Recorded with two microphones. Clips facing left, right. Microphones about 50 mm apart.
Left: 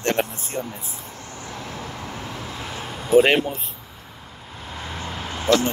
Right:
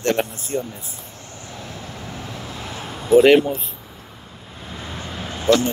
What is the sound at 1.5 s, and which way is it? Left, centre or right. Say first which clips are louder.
Vehicle: left 1 dB; left.